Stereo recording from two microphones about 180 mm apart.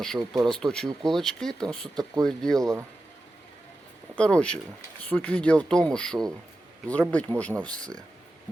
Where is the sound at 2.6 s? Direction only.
15° right (ahead or behind).